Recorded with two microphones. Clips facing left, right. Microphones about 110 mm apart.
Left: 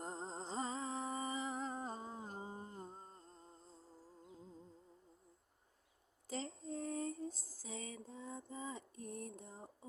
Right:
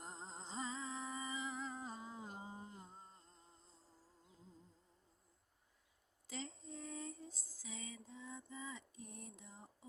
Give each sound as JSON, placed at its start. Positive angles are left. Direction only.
{"t": 0.0, "sound": "music", "side_deg": 40}
{"t": 6.2, "sound": "female singing", "side_deg": 40}